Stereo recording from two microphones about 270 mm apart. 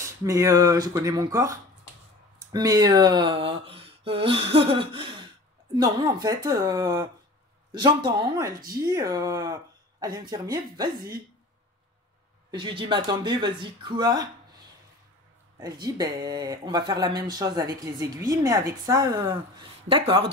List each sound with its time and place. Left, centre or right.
0.0 s speech: centre
12.4 s speech: centre
15.6 s speech: centre